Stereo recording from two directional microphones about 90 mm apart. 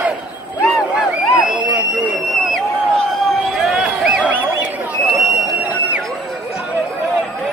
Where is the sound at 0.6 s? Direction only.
10° right (ahead or behind).